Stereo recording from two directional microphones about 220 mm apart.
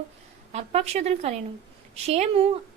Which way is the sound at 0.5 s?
30° right (ahead or behind).